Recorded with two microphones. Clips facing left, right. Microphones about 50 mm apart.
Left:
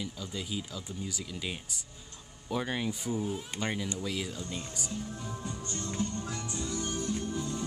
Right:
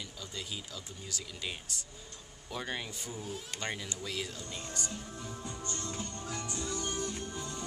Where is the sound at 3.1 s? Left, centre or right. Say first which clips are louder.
Left 7 dB; left.